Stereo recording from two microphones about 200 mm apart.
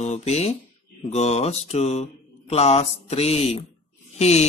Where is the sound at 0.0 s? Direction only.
30° left (ahead or behind).